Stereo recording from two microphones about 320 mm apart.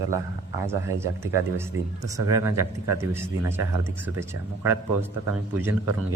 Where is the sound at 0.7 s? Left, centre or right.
Centre.